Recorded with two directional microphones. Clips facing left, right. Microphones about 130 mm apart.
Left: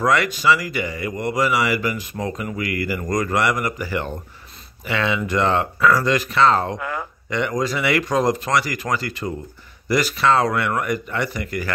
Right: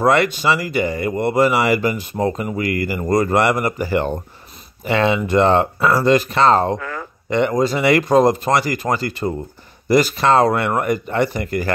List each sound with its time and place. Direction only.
0.0 s speech: 35° right (ahead or behind)
6.8 s a sound: 15° left (ahead or behind)
7.2 s speech: 35° right (ahead or behind)